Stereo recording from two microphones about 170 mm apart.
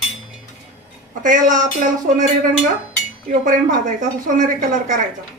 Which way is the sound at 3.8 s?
50° right (ahead or behind).